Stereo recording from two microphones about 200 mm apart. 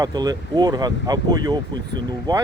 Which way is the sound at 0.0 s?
20° right (ahead or behind).